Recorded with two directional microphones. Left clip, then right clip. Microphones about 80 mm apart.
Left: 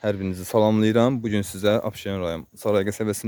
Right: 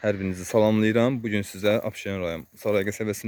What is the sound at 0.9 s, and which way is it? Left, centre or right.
Speech, left.